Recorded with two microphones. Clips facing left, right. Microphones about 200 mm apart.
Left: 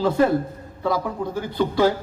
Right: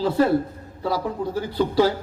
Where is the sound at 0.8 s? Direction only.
35° right (ahead or behind).